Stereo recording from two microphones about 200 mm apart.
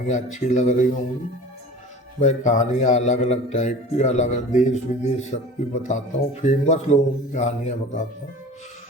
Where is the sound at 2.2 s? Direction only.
35° left (ahead or behind).